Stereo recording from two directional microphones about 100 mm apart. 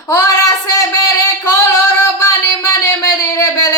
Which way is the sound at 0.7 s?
35° left (ahead or behind).